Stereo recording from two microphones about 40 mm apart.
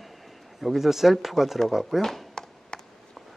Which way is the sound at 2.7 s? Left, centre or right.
Left.